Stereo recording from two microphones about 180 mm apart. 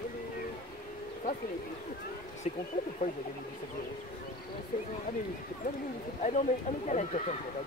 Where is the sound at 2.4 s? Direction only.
40° left (ahead or behind).